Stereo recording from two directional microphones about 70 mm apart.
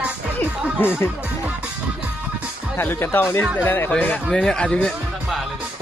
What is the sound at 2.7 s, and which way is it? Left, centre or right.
Speech, left.